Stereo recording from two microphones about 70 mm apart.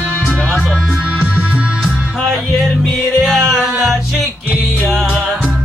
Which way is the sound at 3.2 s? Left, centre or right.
Centre.